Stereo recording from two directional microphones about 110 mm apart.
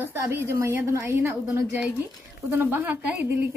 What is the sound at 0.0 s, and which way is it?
Speech, 20° right (ahead or behind).